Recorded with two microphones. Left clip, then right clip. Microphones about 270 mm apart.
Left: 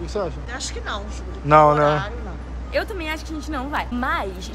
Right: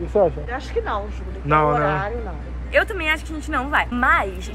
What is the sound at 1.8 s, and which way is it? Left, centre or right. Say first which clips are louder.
Speech: left 2 dB; right.